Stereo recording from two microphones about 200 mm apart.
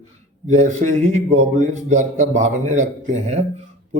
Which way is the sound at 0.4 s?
35° right (ahead or behind).